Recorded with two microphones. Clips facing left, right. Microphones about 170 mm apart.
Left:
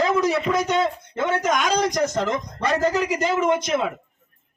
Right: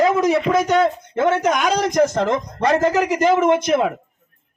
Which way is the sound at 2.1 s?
55° right (ahead or behind).